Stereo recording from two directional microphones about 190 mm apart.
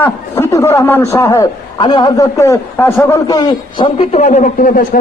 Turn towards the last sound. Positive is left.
turn(degrees=45)  # may be behind; listen again after turning